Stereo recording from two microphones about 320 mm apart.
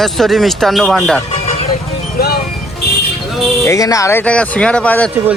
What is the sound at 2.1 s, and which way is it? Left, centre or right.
Music, left.